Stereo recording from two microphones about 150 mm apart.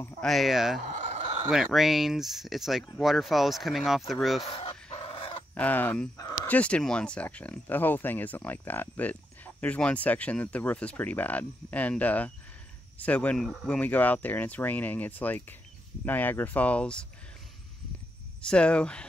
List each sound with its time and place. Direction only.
0.2 s speech: centre (ahead or behind)
0.7 s fowl: 60° right (ahead or behind)
1.5 s speech: centre (ahead or behind)
4.5 s dog: 40° left (ahead or behind)
5.5 s speech: 10° left (ahead or behind)
18.4 s speech: 5° left (ahead or behind)